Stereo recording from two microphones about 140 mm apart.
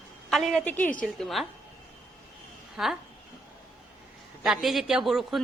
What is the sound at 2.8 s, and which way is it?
Speech, 5° right (ahead or behind).